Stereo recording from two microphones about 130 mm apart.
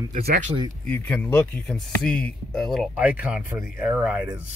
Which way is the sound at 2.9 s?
10° right (ahead or behind).